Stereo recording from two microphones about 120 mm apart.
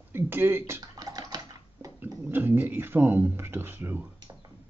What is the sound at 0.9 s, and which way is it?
Typing, 30° right (ahead or behind).